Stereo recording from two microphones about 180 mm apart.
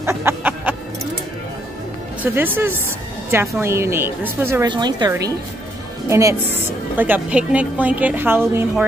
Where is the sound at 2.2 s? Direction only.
10° right (ahead or behind).